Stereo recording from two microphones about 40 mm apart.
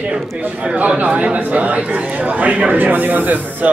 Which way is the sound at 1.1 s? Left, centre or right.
Right.